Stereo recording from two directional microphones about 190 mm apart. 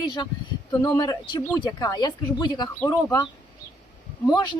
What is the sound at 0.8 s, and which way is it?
Speech, 20° left (ahead or behind).